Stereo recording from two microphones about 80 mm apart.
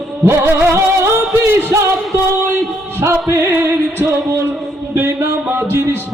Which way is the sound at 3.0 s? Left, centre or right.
Right.